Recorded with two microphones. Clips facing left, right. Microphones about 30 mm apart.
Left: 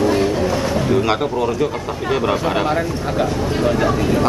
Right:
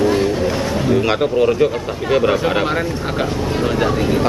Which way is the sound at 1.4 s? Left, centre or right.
Right.